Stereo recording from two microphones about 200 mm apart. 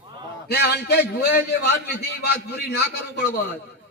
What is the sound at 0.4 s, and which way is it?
A man's voice, 55° left (ahead or behind).